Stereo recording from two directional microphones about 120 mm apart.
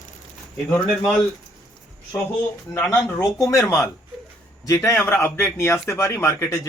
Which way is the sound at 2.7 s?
20° left (ahead or behind).